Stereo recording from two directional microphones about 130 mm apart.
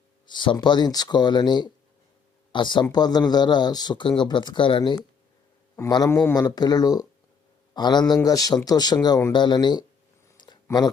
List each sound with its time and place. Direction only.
0.3 s speech: 35° left (ahead or behind)
6.3 s speech: 30° left (ahead or behind)
10.3 s a sound: 35° left (ahead or behind)